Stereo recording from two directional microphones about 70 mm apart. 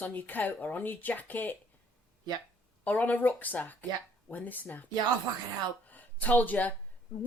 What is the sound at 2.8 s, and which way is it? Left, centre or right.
Speech, left.